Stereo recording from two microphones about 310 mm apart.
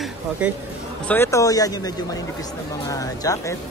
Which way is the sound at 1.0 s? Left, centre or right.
Centre.